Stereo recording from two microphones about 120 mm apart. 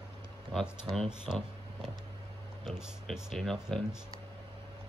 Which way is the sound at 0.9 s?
5° right (ahead or behind).